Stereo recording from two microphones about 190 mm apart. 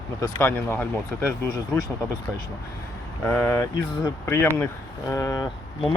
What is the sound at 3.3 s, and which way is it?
Speech, 10° left (ahead or behind).